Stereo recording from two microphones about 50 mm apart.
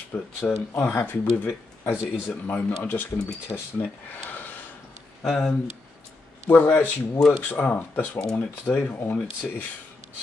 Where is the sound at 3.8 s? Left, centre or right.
Left.